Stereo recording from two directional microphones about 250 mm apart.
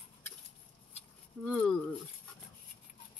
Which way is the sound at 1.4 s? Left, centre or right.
Centre.